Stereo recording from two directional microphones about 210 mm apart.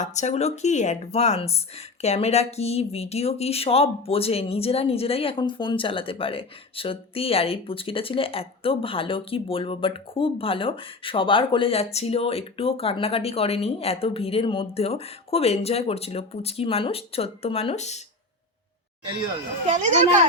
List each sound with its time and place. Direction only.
0.0 s speech: 35° left (ahead or behind)